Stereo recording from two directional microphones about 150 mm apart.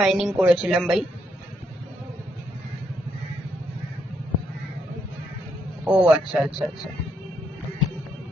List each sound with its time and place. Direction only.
0.0 s a woman's voice: centre (ahead or behind)
5.8 s speech: 10° right (ahead or behind)